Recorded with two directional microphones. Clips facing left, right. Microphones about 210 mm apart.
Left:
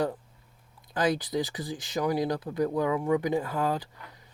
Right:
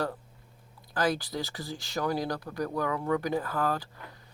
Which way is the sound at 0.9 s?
20° left (ahead or behind).